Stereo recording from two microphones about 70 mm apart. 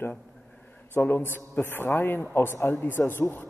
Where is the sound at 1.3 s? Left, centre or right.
Left.